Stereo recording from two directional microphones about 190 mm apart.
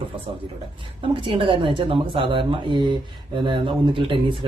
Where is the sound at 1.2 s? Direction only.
25° right (ahead or behind).